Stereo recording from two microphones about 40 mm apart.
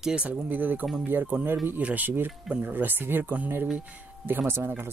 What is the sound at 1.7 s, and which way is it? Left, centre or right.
Speech, right.